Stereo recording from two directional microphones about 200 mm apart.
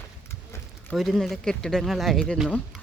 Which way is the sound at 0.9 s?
Centre (ahead or behind).